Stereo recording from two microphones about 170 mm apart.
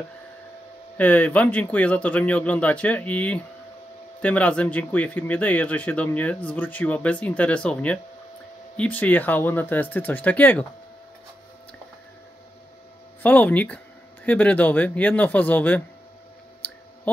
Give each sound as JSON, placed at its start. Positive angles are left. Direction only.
{"t": 0.9, "sound": "speech", "side_deg": 10}
{"t": 13.2, "sound": "speech", "side_deg": 10}